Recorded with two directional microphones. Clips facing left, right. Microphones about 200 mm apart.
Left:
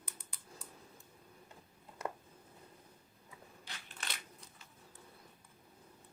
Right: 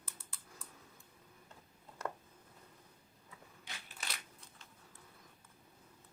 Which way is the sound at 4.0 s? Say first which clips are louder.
Left 1 dB; centre (ahead or behind).